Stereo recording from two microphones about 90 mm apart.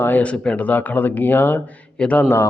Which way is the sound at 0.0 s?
15° left (ahead or behind).